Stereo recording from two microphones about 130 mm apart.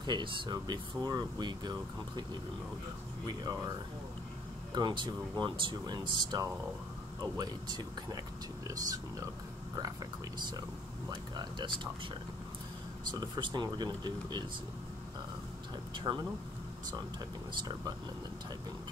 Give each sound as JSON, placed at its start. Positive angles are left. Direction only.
{"t": 0.0, "sound": "speech", "side_deg": -35}
{"t": 3.3, "sound": "speech", "side_deg": -30}
{"t": 4.7, "sound": "speech", "side_deg": -35}
{"t": 11.1, "sound": "speech", "side_deg": -35}
{"t": 13.1, "sound": "speech", "side_deg": -35}
{"t": 16.0, "sound": "speech", "side_deg": -40}